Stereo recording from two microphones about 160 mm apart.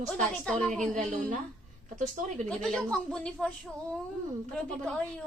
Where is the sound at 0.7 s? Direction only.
50° right (ahead or behind).